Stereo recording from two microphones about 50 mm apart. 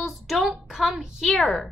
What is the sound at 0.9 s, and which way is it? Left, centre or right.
Speech, centre.